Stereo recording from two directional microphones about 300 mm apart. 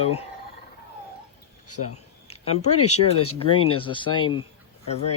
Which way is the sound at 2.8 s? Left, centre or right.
Left.